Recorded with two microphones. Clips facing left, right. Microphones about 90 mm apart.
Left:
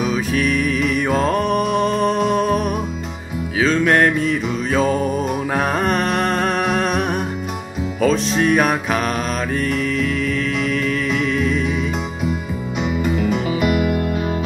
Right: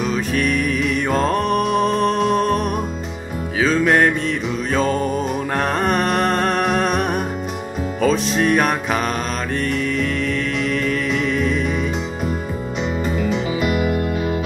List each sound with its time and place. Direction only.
0.0 s music: centre (ahead or behind)
10.6 s music: centre (ahead or behind)
13.2 s music: 50° left (ahead or behind)
13.7 s music: 40° right (ahead or behind)